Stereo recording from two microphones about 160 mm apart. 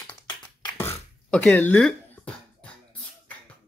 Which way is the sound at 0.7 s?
15° left (ahead or behind).